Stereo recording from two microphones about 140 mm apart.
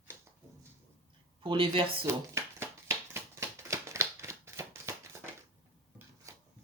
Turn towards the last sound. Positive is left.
turn(degrees=-20)  # may be behind; listen again after turning